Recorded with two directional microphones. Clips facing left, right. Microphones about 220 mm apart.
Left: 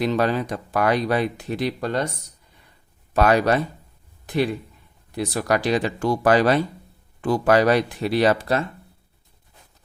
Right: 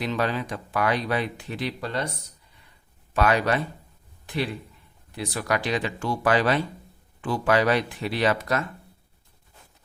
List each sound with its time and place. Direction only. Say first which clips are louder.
0.0 s speech: left 5 dB; 40° left (ahead or behind)
3.1 s speech: left 4 dB; 40° left (ahead or behind)
5.1 s speech: left 5 dB; 40° left (ahead or behind)